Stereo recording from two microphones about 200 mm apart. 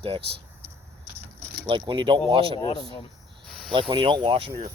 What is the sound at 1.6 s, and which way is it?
Speech, 25° right (ahead or behind).